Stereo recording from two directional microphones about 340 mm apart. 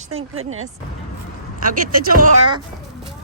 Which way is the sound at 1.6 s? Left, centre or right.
Right.